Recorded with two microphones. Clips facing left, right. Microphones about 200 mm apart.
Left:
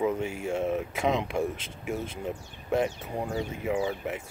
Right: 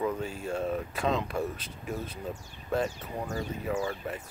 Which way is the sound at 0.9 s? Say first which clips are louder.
Left 2 dB; 20° left (ahead or behind).